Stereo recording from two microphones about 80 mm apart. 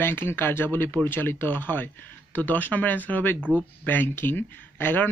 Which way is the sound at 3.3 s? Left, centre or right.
Centre.